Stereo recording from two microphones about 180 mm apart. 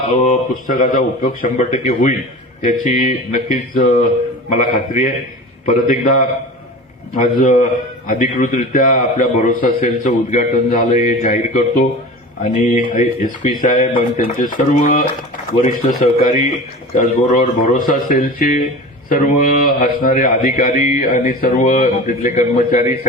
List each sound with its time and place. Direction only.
0.2 s a man's voice: 45° left (ahead or behind)
16.2 s a man's voice: 45° left (ahead or behind)